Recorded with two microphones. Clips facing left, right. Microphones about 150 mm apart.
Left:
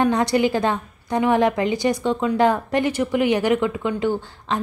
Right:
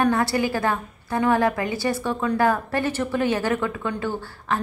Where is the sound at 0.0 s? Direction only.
20° left (ahead or behind).